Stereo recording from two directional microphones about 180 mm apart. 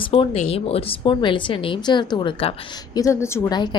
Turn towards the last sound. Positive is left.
turn(degrees=25)  # may be behind; listen again after turning